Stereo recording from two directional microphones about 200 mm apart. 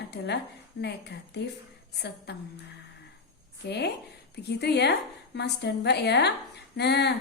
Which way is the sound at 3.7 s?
55° left (ahead or behind).